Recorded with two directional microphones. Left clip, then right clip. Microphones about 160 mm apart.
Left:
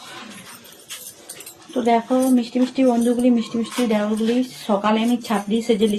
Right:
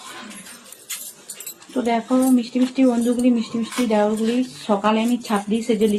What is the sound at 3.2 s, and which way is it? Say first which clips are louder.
Speech: left 1 dB; 35° left (ahead or behind).